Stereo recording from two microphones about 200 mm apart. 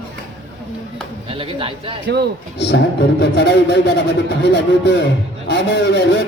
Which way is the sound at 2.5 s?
55° left (ahead or behind).